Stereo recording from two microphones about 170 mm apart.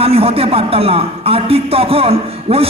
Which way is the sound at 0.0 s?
35° right (ahead or behind).